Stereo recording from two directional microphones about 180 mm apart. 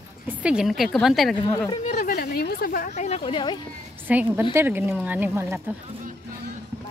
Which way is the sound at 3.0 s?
35° left (ahead or behind).